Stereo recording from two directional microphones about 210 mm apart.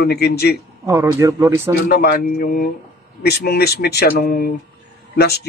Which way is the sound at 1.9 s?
45° left (ahead or behind).